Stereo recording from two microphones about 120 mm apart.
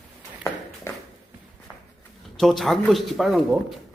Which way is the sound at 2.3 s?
Centre (ahead or behind).